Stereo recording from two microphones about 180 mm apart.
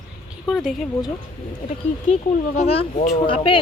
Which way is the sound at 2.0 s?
40° left (ahead or behind).